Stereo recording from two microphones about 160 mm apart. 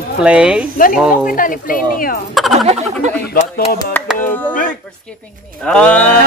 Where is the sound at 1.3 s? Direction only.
60° left (ahead or behind).